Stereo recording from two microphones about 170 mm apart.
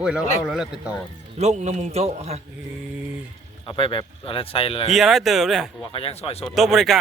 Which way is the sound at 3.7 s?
30° left (ahead or behind).